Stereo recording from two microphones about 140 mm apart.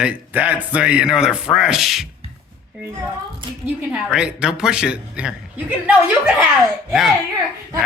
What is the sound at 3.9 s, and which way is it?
A man's voice, 5° right (ahead or behind).